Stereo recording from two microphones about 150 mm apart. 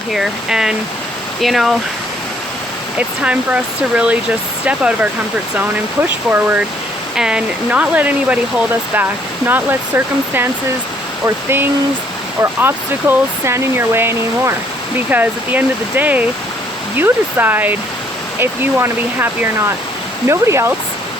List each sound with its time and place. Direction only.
0.1 s speech: 5° right (ahead or behind)
3.0 s speech: 10° right (ahead or behind)